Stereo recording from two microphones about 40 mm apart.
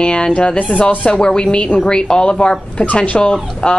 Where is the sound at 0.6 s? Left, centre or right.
Left.